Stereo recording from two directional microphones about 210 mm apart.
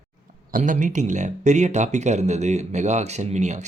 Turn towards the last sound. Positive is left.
turn(degrees=-35)  # may be behind; listen again after turning